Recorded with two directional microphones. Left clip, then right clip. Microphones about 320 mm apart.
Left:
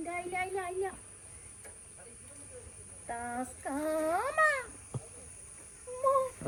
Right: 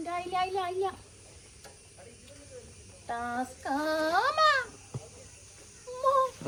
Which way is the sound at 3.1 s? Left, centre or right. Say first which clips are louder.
Right 5 dB; right.